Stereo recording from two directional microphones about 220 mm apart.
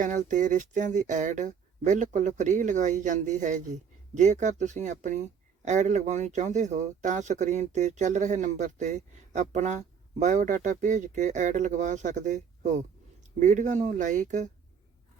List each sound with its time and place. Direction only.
0.0 s speech: 35° right (ahead or behind)